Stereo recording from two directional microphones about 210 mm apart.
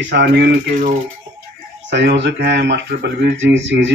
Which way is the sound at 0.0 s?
50° right (ahead or behind).